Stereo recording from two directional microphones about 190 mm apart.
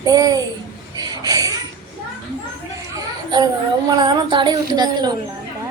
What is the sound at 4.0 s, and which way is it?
A woman's voice, 25° right (ahead or behind).